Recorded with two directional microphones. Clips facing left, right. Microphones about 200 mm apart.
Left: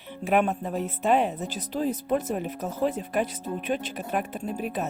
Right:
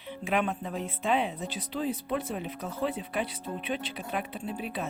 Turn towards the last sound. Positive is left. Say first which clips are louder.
# left 4 dB
turn(degrees=45)  # may be behind; listen again after turning